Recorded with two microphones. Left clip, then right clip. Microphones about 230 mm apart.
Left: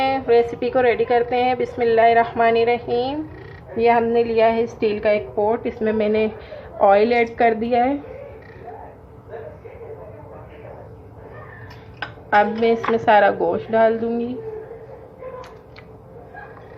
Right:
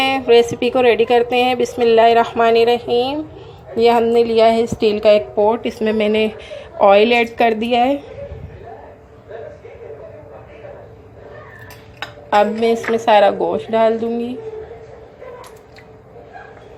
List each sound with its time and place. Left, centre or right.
0.0 s a woman's voice: centre
12.4 s a woman's voice: centre